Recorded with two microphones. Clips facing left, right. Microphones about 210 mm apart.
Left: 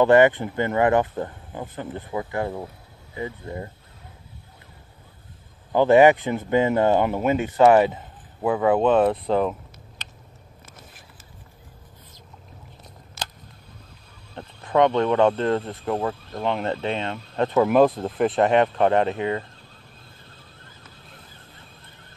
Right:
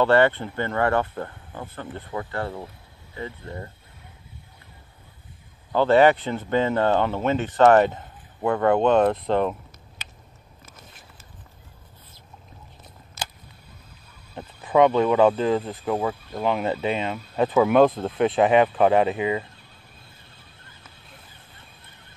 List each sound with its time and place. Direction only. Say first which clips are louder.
0.0 s speech: left 3 dB; 15° left (ahead or behind)
5.7 s speech: left 2 dB; 15° left (ahead or behind)
14.3 s speech: right 1 dB; 5° right (ahead or behind)